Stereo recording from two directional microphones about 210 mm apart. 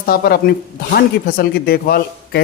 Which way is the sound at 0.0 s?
45° left (ahead or behind).